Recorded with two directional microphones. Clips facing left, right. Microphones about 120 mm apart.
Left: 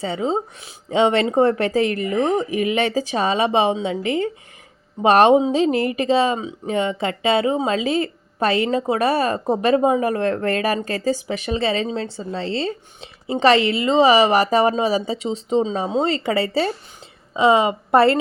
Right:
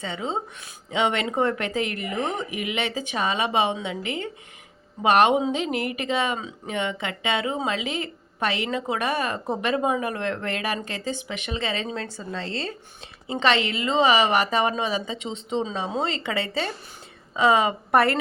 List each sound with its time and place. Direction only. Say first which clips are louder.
0.0 s speech: left 7 dB; 35° left (ahead or behind)
17.3 s a woman's voice: left 4 dB; 25° left (ahead or behind)